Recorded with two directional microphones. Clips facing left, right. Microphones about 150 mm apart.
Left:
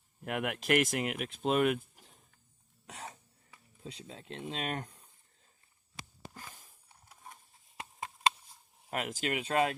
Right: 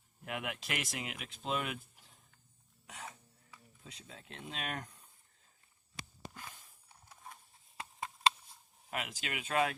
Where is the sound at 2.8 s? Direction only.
35° left (ahead or behind).